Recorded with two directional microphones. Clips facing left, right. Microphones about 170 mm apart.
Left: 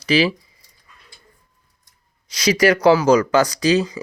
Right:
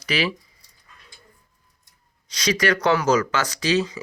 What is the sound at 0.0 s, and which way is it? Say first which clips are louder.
Speech: left 7 dB; 30° left (ahead or behind).